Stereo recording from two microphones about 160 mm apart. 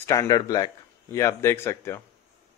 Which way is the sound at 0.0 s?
20° left (ahead or behind).